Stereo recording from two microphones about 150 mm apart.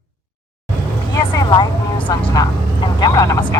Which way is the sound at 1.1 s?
30° left (ahead or behind).